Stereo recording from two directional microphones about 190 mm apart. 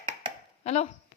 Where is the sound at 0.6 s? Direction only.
35° left (ahead or behind).